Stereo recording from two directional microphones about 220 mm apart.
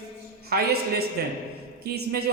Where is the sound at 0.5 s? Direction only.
45° right (ahead or behind).